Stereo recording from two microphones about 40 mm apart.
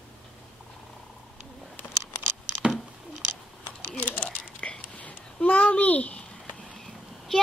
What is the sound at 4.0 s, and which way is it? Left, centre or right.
Typing, left.